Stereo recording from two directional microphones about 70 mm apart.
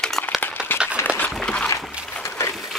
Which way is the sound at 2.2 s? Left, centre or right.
Left.